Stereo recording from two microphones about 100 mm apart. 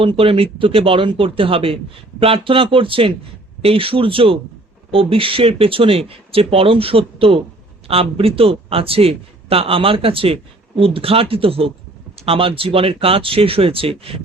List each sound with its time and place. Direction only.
0.0 s speech: 65° right (ahead or behind)